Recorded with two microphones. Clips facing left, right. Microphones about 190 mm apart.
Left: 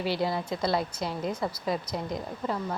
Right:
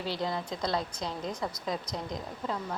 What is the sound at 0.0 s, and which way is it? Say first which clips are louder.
A woman's voice: left 4 dB; 10° left (ahead or behind).